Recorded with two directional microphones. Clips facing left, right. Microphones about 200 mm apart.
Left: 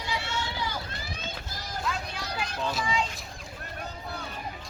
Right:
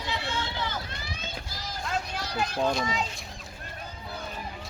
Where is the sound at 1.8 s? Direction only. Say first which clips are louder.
Right 2 dB; 45° right (ahead or behind).